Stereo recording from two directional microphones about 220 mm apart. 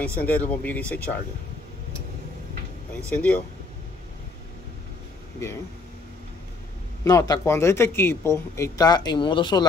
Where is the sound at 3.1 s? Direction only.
5° left (ahead or behind).